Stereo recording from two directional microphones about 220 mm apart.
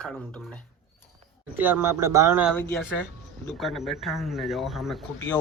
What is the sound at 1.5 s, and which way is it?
Speech, 10° right (ahead or behind).